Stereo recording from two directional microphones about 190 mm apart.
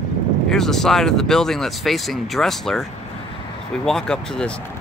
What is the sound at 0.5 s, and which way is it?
Speech, centre (ahead or behind).